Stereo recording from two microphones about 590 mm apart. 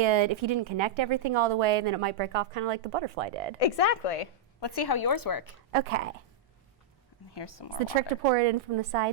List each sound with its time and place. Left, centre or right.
0.0 s a woman's voice: right
3.6 s speech: left
4.6 s a woman's voice: left
5.7 s a woman's voice: right
7.3 s speech: left
8.2 s a woman's voice: right